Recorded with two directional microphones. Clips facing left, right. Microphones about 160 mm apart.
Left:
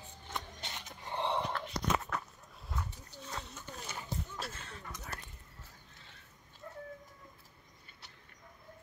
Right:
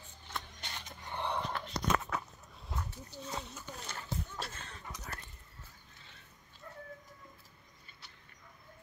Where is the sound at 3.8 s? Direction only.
10° left (ahead or behind).